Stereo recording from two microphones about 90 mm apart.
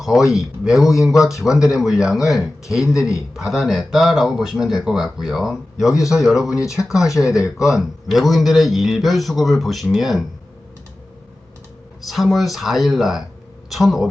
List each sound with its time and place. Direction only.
0.0 s speech: 5° right (ahead or behind)
1.2 s speech: 35° left (ahead or behind)
1.8 s speech: 5° right (ahead or behind)
12.0 s a man's voice: centre (ahead or behind)